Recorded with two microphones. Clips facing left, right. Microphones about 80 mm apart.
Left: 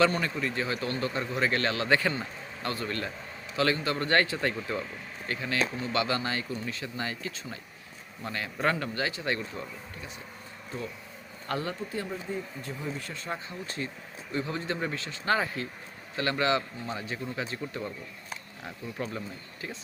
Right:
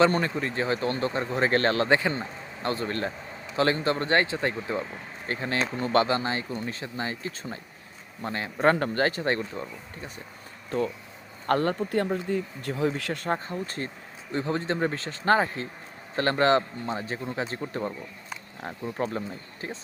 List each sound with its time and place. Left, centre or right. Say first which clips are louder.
0.2 s a man's voice: right 3 dB; right
1.9 s a man's voice: right 2 dB; right
6.1 s a man's voice: right 3 dB; right
8.7 s speech: right 6 dB; right
10.7 s speech: right 10 dB; right
12.3 s a man's voice: right 6 dB; right